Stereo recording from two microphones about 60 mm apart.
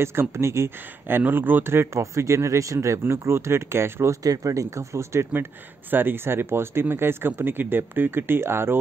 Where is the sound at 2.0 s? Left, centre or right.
Right.